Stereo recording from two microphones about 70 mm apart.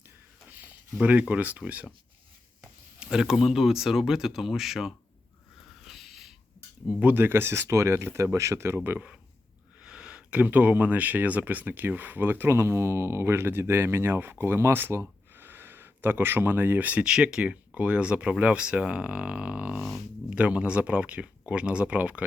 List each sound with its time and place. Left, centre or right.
0.4 s a sound: right
1.3 s speech: right
3.0 s speech: centre
5.8 s a sound: centre
7.0 s speech: right
9.8 s speech: centre